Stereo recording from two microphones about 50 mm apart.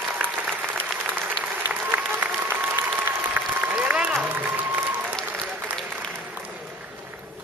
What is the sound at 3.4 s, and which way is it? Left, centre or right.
Applause, right.